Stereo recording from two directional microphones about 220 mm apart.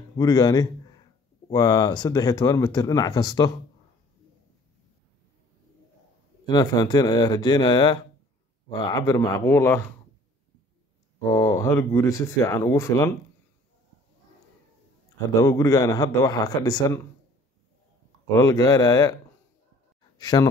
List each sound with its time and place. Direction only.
0.2 s a man's voice: 15° left (ahead or behind)
6.4 s speech: 20° left (ahead or behind)
11.1 s speech: 15° left (ahead or behind)
15.3 s speech: 15° left (ahead or behind)
18.3 s speech: 15° left (ahead or behind)
20.2 s speech: 20° left (ahead or behind)